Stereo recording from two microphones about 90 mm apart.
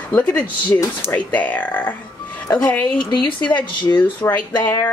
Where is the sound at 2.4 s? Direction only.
45° left (ahead or behind).